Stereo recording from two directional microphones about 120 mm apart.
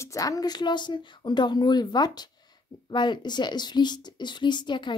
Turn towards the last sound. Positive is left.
turn(degrees=40)  # may be behind; listen again after turning